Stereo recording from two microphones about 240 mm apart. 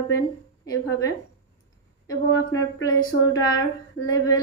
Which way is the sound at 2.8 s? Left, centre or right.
Centre.